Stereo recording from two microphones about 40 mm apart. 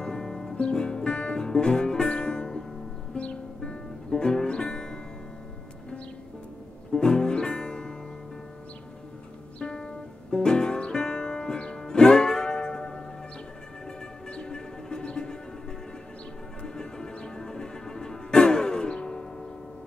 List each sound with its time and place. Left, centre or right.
0.0 s music: centre
3.2 s music: left
4.1 s music: centre
7.0 s music: centre
9.6 s music: left
16.6 s music: centre